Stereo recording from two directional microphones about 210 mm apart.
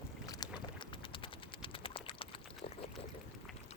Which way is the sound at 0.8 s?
25° left (ahead or behind).